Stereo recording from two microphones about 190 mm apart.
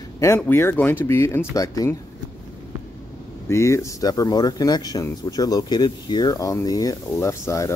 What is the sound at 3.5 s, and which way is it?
Speech, 15° left (ahead or behind).